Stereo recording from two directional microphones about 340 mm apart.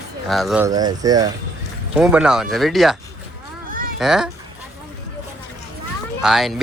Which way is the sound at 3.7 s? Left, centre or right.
Right.